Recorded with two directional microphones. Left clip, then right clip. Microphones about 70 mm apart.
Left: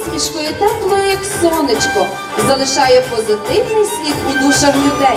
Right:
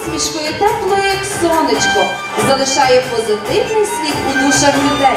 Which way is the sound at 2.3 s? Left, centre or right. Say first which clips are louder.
Even; centre.